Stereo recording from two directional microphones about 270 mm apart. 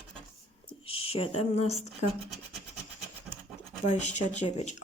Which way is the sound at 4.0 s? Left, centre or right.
Left.